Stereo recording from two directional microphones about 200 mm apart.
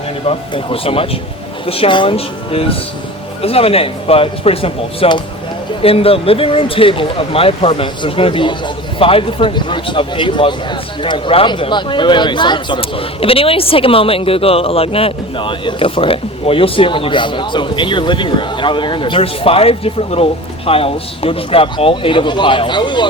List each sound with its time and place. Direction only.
0.3 s speech: 30° left (ahead or behind)